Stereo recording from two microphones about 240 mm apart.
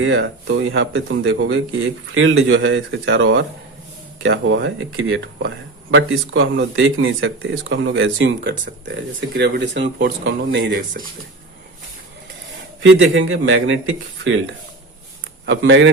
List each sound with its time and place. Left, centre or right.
0.0 s speech: right
12.8 s speech: right
15.4 s speech: right